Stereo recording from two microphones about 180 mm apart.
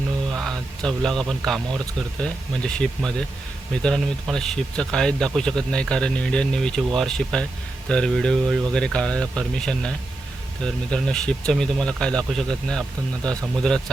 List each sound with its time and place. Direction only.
0.4 s speech: centre (ahead or behind)
10.9 s speech: 5° left (ahead or behind)